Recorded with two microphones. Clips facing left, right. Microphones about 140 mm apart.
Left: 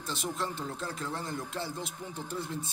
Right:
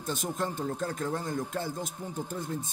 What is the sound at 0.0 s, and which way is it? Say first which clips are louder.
Speech: right 3 dB; 50° right (ahead or behind).